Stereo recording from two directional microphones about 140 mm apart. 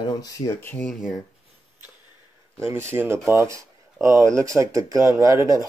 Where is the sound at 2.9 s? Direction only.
15° right (ahead or behind).